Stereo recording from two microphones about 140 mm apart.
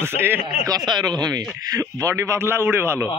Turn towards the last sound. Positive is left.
turn(degrees=-15)  # may be behind; listen again after turning